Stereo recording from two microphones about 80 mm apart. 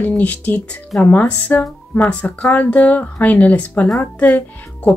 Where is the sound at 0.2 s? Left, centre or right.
Centre.